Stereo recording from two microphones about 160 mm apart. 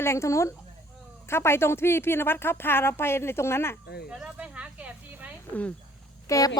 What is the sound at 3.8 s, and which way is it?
Speech, 80° left.